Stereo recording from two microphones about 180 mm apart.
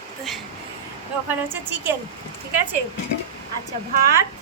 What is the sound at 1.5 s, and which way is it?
Speech, 10° right (ahead or behind).